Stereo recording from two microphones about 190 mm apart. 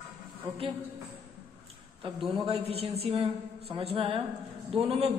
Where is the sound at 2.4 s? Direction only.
30° right (ahead or behind).